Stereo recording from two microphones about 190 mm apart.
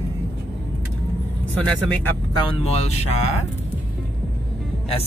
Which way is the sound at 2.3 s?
30° left (ahead or behind).